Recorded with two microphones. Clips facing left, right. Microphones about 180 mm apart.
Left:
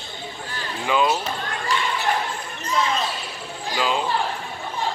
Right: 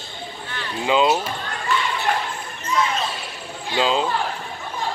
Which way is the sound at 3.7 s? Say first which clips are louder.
Right 3 dB; 20° right (ahead or behind).